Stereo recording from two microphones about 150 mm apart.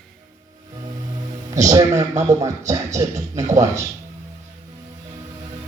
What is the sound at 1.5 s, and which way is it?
Speech, 20° right (ahead or behind).